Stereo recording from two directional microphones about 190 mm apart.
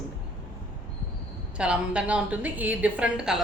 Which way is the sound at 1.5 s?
5° right (ahead or behind).